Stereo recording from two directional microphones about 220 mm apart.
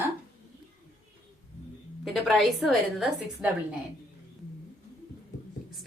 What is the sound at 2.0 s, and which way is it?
A woman's voice, centre (ahead or behind).